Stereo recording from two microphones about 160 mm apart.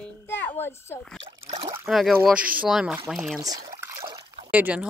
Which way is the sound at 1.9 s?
Centre (ahead or behind).